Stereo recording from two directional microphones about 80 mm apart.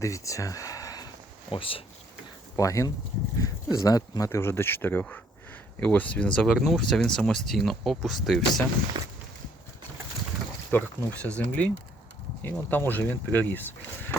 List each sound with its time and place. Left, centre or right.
0.0 s speech: left
1.5 s speech: left
2.6 s speech: left
4.3 s speech: left; by 6.5 s centre
6.5 s speech: centre
8.9 s walk: right
10.7 s speech: centre